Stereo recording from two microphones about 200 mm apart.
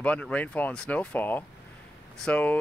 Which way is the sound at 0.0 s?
5° left (ahead or behind).